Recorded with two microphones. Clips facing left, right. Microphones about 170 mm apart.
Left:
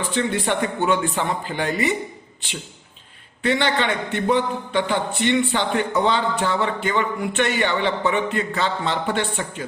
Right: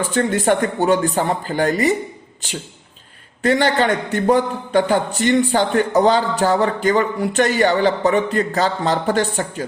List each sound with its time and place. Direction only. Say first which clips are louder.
0.0 s a man's voice: right 5 dB; 45° right (ahead or behind)